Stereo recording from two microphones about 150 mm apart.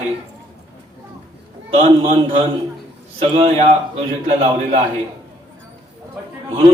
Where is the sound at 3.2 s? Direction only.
45° right (ahead or behind).